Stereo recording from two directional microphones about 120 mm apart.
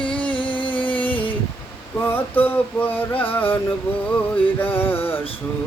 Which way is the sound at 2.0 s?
15° left (ahead or behind).